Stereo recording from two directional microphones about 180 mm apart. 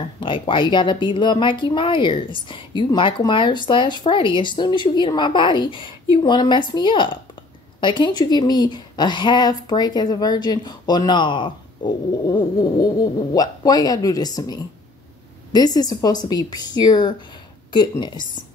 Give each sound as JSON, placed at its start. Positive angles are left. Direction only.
{"t": 0.2, "sound": "speech", "side_deg": 30}